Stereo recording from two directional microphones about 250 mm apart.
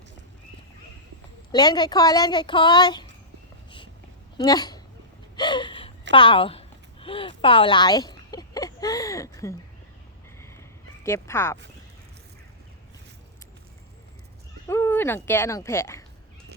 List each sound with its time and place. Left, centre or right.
1.5 s a child's voice: centre
4.4 s speech: centre
5.4 s gasp: centre
6.1 s speech: left
10.4 s fowl: centre
14.7 s speech: centre